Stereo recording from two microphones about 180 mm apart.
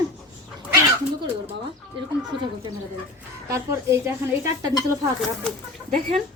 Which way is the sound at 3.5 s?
15° right (ahead or behind).